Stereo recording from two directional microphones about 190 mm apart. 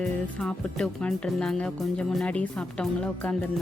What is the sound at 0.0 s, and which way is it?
Music, 5° left (ahead or behind).